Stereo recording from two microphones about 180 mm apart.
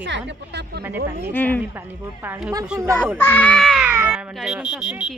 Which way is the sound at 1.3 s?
10° left (ahead or behind).